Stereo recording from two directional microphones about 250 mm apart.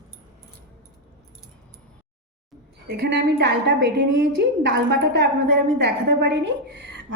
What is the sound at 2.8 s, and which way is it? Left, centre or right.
A woman's voice, right.